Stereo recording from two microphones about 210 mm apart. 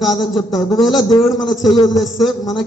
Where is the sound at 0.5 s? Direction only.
20° left (ahead or behind).